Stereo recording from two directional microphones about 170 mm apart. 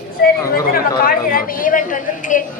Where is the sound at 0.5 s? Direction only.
60° left (ahead or behind).